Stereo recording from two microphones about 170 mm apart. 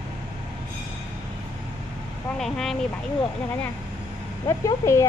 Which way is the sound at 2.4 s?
Centre (ahead or behind).